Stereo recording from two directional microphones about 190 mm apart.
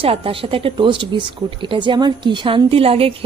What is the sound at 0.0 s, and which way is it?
Speech, 30° right (ahead or behind).